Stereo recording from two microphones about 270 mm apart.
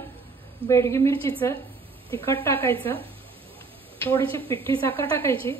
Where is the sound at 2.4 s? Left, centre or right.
Centre.